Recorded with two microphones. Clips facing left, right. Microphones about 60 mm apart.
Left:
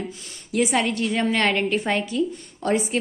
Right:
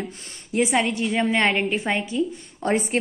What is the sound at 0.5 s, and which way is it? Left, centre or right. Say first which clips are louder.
A woman's voice: even; centre.